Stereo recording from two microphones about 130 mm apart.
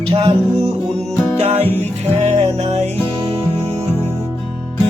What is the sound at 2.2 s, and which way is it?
Music, 55° right (ahead or behind).